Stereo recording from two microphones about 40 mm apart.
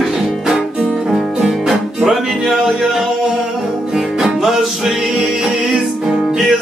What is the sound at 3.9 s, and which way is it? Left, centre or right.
Music, centre.